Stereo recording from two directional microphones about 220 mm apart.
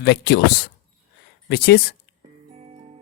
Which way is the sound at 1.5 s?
50° left (ahead or behind).